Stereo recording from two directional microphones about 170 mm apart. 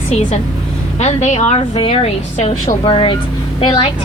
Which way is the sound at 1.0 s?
40° left (ahead or behind).